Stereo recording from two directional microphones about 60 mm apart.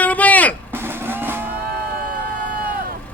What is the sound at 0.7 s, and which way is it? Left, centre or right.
Vehicle, right.